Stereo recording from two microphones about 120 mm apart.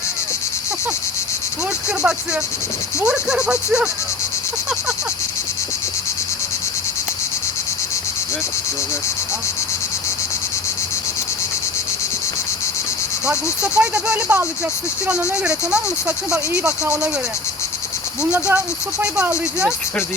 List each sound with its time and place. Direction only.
2.0 s speech: 10° right (ahead or behind)
13.2 s speech: 10° right (ahead or behind)
18.3 s speech: 20° right (ahead or behind)